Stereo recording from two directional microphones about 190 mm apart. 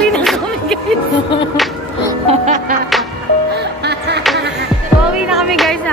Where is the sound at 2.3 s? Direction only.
40° right (ahead or behind).